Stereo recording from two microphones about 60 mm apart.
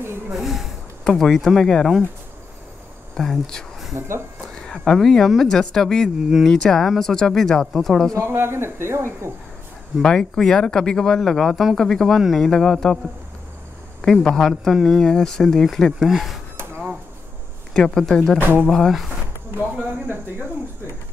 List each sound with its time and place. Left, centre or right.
0.3 s speech: centre
3.2 s speech: centre
3.9 s speech: right
4.6 s speech: centre
8.2 s speech: right
10.0 s speech: centre
14.0 s speech: centre
17.7 s speech: centre
18.4 s speech: right
18.7 s speech: centre
20.1 s speech: right